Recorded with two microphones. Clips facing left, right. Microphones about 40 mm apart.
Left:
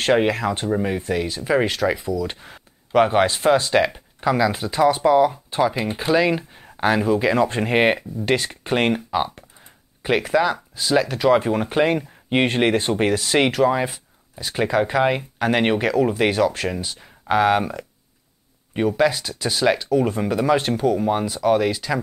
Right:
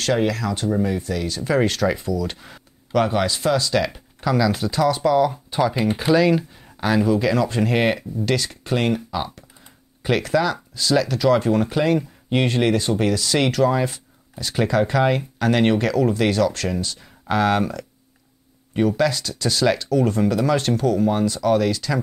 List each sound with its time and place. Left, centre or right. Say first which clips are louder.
0.0 s speech: left 3 dB; left
1.3 s speech: right 2 dB; centre
2.9 s speech: left 3 dB; left
5.9 s speech: right 3 dB; centre
6.1 s speech: even; centre; by 9.2 s left
10.0 s speech: left 1 dB; centre